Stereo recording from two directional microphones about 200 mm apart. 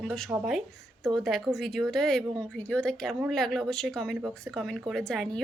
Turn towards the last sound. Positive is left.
turn(degrees=5)  # may be behind; listen again after turning